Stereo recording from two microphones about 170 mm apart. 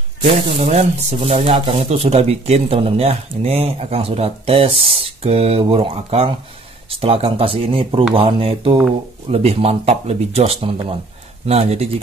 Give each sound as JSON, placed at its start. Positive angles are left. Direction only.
{"t": 0.2, "sound": "speech", "side_deg": -35}